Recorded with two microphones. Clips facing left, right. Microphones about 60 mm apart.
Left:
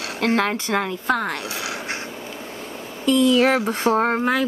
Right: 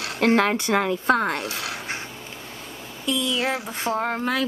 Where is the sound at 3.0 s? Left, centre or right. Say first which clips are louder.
Left 8 dB; left.